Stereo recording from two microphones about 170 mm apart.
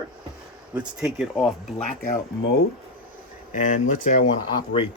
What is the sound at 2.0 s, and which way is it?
Speech, 55° left (ahead or behind).